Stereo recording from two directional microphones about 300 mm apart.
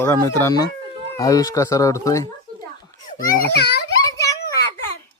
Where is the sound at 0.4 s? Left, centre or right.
Centre.